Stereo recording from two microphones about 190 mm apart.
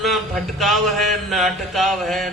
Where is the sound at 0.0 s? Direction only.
Centre (ahead or behind).